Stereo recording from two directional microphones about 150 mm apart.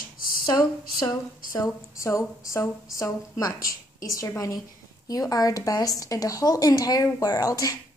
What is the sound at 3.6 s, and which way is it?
Speech, 70° left (ahead or behind).